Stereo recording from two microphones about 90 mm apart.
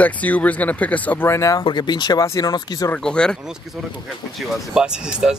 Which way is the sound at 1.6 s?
55° left (ahead or behind).